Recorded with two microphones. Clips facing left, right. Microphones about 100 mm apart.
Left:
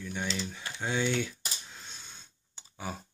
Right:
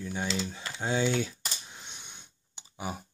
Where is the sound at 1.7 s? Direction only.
20° right (ahead or behind).